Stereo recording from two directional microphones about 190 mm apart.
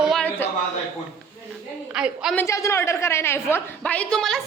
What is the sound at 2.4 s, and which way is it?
A woman's voice, 15° left (ahead or behind).